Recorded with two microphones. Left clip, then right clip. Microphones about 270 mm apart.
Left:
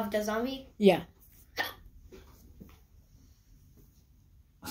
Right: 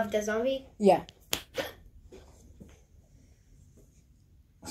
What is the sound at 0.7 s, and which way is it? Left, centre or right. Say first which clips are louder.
Speech: right 1 dB; left.